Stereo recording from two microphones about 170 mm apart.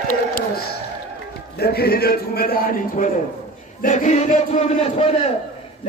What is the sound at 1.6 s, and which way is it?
A man's voice, 65° left (ahead or behind).